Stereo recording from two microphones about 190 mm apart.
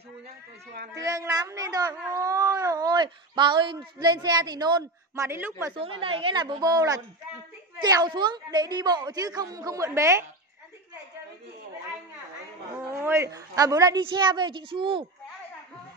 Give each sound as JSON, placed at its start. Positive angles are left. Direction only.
{"t": 0.9, "sound": "speech", "side_deg": -20}
{"t": 5.8, "sound": "speech", "side_deg": -30}
{"t": 12.7, "sound": "speech", "side_deg": -10}